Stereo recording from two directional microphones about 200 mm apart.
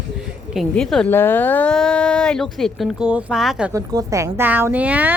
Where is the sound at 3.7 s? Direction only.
15° right (ahead or behind).